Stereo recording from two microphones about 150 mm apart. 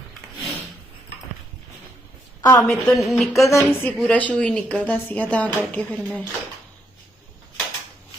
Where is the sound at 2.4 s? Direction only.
25° left (ahead or behind).